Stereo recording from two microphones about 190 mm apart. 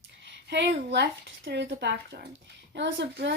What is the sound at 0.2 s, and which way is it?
A woman's voice, 70° right (ahead or behind).